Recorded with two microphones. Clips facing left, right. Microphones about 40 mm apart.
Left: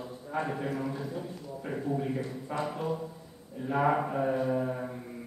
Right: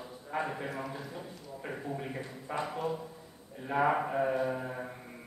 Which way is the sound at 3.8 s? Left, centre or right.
Centre.